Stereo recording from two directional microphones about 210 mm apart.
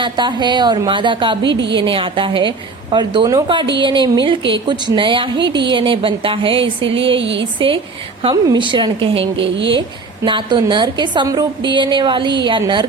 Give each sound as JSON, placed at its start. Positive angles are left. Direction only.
{"t": 0.0, "sound": "a woman's voice", "side_deg": -20}
{"t": 7.2, "sound": "speech", "side_deg": -60}
{"t": 8.2, "sound": "a woman's voice", "side_deg": -25}
{"t": 9.3, "sound": "speech", "side_deg": -60}
{"t": 10.2, "sound": "a woman's voice", "side_deg": -25}